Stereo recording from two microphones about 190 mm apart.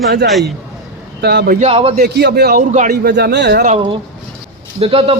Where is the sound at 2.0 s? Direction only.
60° right (ahead or behind).